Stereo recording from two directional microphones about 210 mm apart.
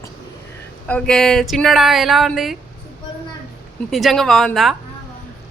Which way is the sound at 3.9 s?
Centre (ahead or behind).